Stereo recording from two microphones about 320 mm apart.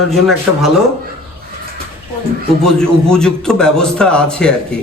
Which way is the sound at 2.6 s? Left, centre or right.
Centre.